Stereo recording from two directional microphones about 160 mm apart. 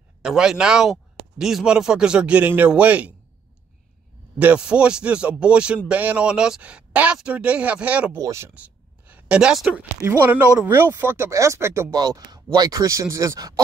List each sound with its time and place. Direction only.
0.2 s speech: 5° right (ahead or behind)
4.4 s speech: 5° right (ahead or behind)